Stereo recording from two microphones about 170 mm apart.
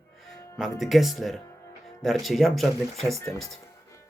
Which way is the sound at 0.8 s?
Centre (ahead or behind).